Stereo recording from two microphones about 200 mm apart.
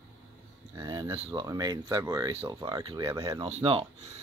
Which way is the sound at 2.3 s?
30° right (ahead or behind).